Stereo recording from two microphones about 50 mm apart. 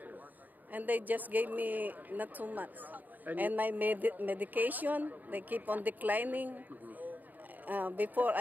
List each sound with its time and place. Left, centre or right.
0.7 s a woman's voice: right